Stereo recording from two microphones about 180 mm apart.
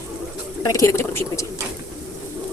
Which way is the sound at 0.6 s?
20° left (ahead or behind).